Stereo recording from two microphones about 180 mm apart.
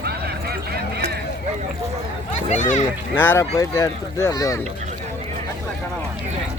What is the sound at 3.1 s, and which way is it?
Speech, 10° left (ahead or behind).